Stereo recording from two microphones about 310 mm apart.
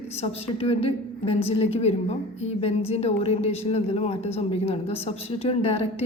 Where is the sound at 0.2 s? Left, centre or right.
Centre.